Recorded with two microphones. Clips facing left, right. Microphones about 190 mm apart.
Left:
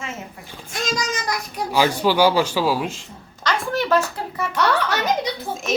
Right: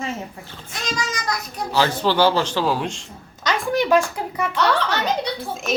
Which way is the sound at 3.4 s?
15° right (ahead or behind).